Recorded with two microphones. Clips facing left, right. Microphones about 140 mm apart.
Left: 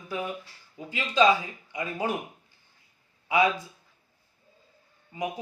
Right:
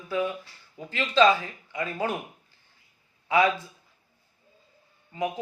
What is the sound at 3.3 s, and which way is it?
Speech, 15° left (ahead or behind).